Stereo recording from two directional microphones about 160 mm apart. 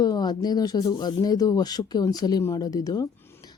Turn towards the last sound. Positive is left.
turn(degrees=20)  # may be behind; listen again after turning